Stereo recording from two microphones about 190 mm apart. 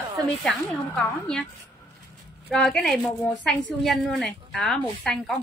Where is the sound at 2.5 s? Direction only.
Centre (ahead or behind).